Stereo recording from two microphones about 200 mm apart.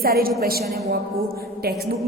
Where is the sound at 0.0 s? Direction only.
50° right (ahead or behind).